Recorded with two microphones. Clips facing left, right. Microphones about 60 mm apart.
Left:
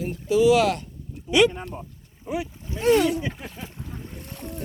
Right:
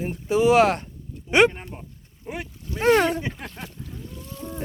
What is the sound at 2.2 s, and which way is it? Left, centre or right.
Speech, right.